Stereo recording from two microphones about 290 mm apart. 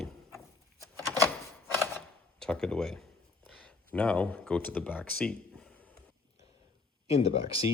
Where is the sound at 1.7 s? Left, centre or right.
Centre.